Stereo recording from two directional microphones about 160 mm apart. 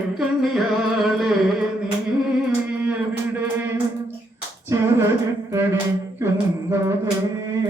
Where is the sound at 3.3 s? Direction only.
10° right (ahead or behind).